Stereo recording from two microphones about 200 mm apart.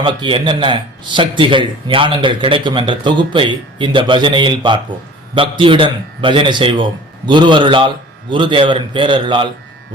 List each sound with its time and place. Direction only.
0.0 s a man's voice: 25° right (ahead or behind)